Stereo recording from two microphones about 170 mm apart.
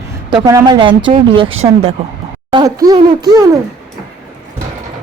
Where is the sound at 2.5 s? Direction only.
20° right (ahead or behind).